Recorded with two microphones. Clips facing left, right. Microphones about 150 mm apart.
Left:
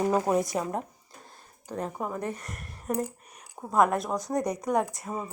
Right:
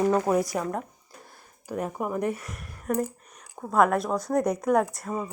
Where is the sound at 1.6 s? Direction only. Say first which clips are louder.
Right 3 dB; 10° right (ahead or behind).